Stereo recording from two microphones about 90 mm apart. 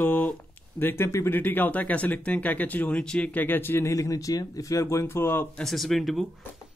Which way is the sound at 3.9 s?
40° left (ahead or behind).